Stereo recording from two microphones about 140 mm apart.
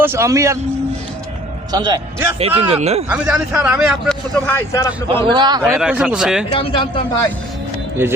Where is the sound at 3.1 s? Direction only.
10° right (ahead or behind).